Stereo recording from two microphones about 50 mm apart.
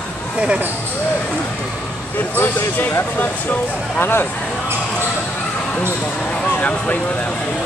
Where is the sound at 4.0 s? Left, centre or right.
Left.